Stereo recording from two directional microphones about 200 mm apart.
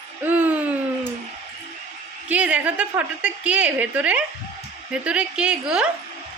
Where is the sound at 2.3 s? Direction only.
5° right (ahead or behind).